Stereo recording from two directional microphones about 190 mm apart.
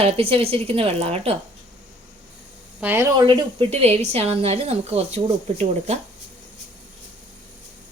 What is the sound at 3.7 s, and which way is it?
A woman's voice, 35° right (ahead or behind).